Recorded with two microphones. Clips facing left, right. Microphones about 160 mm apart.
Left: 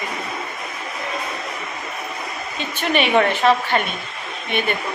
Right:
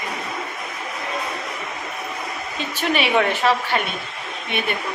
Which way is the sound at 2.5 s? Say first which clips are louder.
Left 2 dB; 5° right (ahead or behind).